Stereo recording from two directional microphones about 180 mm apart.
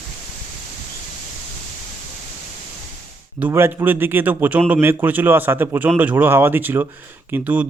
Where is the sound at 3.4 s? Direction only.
10° right (ahead or behind).